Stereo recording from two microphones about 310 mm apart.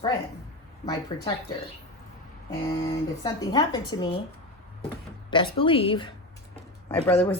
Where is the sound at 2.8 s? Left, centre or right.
Centre.